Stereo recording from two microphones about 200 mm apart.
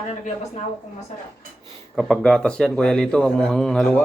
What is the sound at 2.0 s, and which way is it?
Speech, 5° left (ahead or behind).